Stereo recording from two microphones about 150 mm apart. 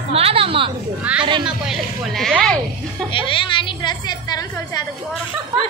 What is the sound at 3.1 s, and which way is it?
A woman's voice, 35° left (ahead or behind).